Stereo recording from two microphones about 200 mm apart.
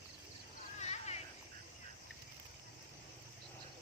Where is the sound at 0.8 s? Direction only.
35° left (ahead or behind).